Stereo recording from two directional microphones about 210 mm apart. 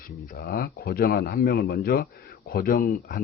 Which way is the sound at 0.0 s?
45° left (ahead or behind).